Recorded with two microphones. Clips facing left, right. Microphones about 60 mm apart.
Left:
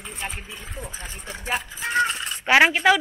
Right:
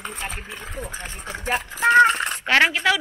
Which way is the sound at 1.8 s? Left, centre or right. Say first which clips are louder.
Right 10 dB; right.